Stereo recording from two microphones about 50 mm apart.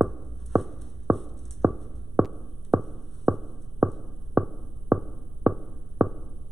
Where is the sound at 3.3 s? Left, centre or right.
Right.